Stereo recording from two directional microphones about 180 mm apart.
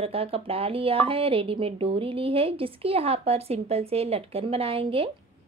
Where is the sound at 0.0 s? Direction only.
30° right (ahead or behind).